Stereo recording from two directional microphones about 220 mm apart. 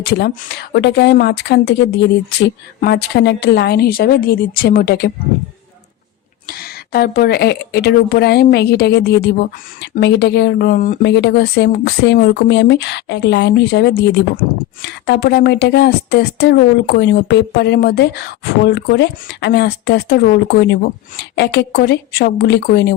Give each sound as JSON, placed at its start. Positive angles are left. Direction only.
{"t": 0.0, "sound": "speech", "side_deg": 45}
{"t": 6.5, "sound": "speech", "side_deg": 45}